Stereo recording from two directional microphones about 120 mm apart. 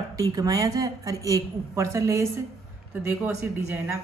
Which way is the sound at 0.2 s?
30° right (ahead or behind).